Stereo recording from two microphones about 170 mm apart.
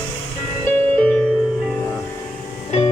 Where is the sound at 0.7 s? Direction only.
10° left (ahead or behind).